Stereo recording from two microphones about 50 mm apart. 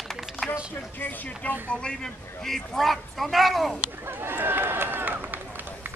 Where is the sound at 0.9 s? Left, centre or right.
Left.